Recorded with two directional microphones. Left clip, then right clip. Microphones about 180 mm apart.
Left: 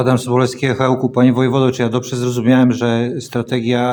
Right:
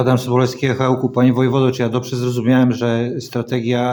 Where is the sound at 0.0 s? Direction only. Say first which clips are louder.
Left 1 dB; 20° left (ahead or behind).